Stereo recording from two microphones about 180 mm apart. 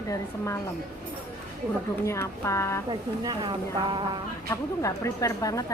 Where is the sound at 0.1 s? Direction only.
15° left (ahead or behind).